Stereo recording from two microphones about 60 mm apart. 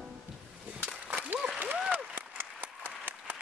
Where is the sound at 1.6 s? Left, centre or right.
Right.